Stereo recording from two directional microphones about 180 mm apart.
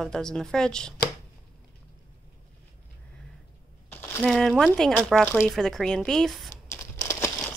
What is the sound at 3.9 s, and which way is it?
A woman's voice, 5° left (ahead or behind).